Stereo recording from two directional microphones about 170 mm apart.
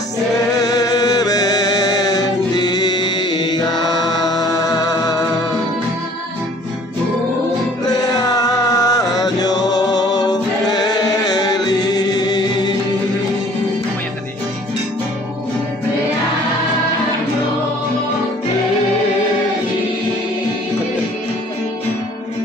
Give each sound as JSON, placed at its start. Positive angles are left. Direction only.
{"t": 0.6, "sound": "music", "side_deg": 20}
{"t": 7.8, "sound": "music", "side_deg": 25}